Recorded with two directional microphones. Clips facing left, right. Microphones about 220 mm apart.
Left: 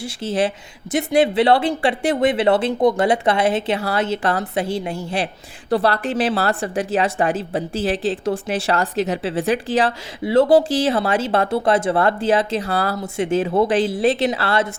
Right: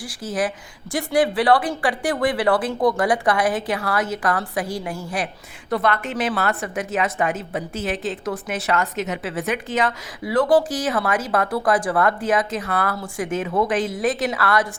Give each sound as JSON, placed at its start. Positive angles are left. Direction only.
{"t": 0.0, "sound": "a woman's voice", "side_deg": 25}